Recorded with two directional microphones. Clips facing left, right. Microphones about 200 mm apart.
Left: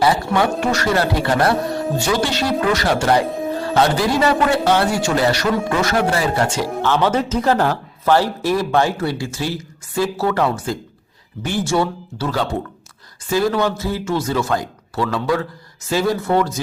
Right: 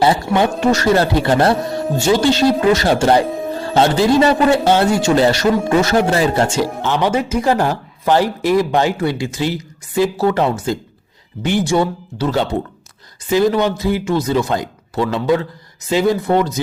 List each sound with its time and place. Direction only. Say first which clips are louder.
0.3 s speech: right 3 dB; 25° right (ahead or behind)
3.2 s music: right 1 dB; centre (ahead or behind)
3.8 s speech: right 5 dB; 25° right (ahead or behind)
6.9 s speech: right 1 dB; 15° right (ahead or behind)